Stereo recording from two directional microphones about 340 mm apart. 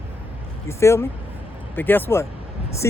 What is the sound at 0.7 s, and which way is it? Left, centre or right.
Speech, centre.